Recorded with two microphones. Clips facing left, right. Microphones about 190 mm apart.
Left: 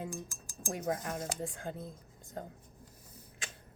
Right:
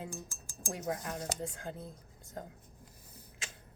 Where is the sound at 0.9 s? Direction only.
25° left (ahead or behind).